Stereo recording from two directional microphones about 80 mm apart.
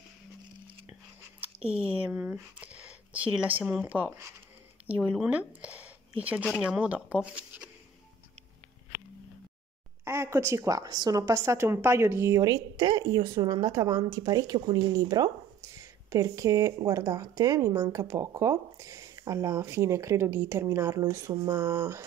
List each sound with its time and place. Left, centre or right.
1.4 s speech: centre
2.6 s a sound: centre
3.8 s speech: right
10.0 s a woman's voice: right
13.7 s a woman's voice: right
15.7 s a sound: right
16.8 s a woman's voice: right